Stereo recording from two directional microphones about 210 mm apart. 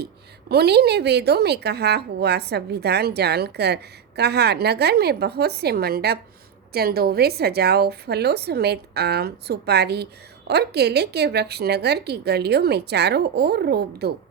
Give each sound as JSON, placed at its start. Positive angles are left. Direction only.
{"t": 0.0, "sound": "a woman's voice", "side_deg": -50}